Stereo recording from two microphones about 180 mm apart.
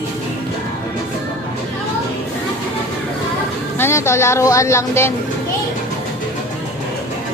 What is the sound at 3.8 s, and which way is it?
A woman's voice, 15° left (ahead or behind).